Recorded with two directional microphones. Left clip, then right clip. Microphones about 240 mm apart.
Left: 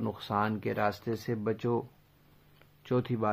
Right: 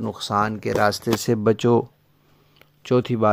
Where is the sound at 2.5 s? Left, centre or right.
Right.